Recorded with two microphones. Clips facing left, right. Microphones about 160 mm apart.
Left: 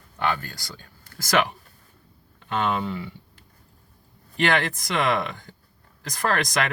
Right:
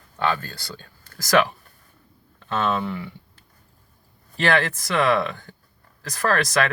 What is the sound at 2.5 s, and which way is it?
Speech, 15° left (ahead or behind).